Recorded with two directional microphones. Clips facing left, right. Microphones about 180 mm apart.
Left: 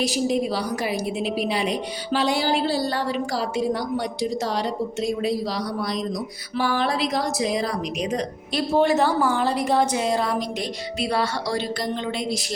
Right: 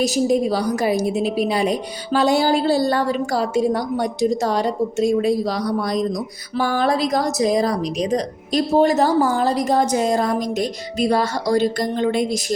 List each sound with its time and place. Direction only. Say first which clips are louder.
0.0 s a woman's voice: right 5 dB; 45° right (ahead or behind)